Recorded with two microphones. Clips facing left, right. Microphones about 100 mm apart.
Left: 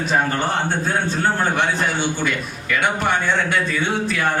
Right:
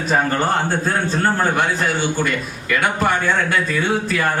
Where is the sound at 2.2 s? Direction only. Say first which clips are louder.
Right 1 dB; centre (ahead or behind).